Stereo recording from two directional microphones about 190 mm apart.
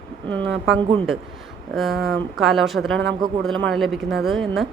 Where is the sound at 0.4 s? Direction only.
70° right (ahead or behind).